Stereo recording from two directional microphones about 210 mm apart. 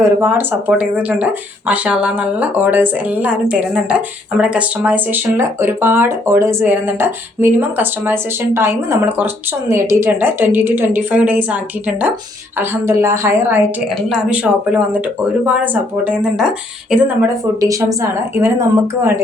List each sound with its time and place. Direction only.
0.0 s speech: 10° right (ahead or behind)